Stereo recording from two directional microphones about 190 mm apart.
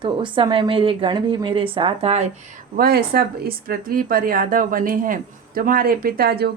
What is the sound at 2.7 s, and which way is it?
Speech, 55° right (ahead or behind).